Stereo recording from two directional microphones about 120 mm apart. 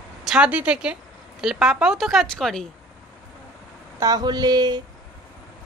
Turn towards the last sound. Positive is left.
turn(degrees=-35)  # may be behind; listen again after turning